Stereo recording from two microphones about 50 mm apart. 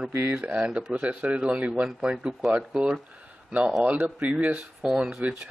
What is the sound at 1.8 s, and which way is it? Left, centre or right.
Speech, centre.